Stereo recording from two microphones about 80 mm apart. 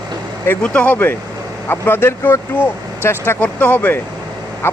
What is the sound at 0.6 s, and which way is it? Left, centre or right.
Speech, centre.